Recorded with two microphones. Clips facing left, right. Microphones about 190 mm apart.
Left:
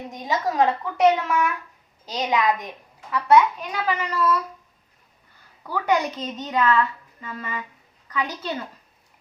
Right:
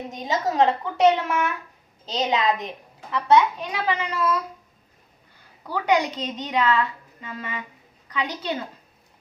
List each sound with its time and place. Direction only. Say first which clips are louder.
0.1 s a woman's voice: even; 25° right (ahead or behind)
5.6 s a woman's voice: right 1 dB; 20° right (ahead or behind)